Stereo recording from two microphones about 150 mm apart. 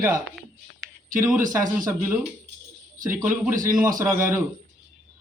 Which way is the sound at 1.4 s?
65° right (ahead or behind).